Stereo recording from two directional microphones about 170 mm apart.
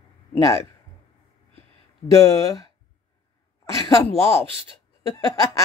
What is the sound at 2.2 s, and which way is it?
Laughter, 20° left (ahead or behind).